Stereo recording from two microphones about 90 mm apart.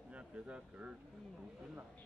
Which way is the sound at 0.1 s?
15° right (ahead or behind).